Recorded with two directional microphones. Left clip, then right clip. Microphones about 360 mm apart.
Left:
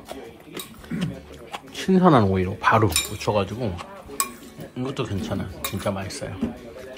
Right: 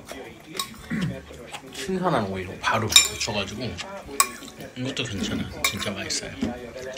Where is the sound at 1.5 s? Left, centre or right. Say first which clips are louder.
Left 7 dB; left.